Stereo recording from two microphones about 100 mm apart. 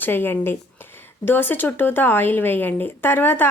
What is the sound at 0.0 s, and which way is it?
Speech, 20° left (ahead or behind).